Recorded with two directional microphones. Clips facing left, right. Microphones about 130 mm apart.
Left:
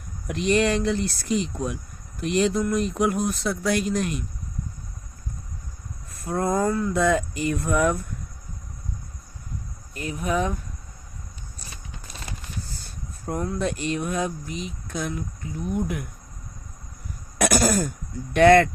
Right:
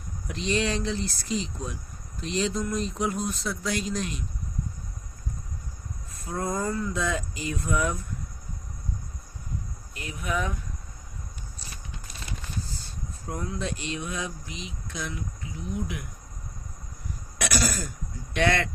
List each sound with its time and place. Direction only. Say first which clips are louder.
0.3 s speech: left 6 dB; 60° left (ahead or behind)
6.1 s speech: left 6 dB; 60° left (ahead or behind)
9.9 s speech: left 5 dB; 40° left (ahead or behind)
13.2 s speech: left 6 dB; 55° left (ahead or behind)
17.3 s throat clearing: left 8 dB; 50° left (ahead or behind)
18.3 s speech: left 10 dB; 50° left (ahead or behind)